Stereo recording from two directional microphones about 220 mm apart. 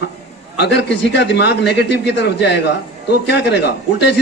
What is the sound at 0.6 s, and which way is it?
A man's voice, 50° left (ahead or behind).